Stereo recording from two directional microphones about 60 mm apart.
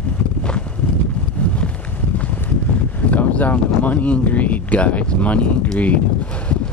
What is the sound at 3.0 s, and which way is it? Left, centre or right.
Speech, left.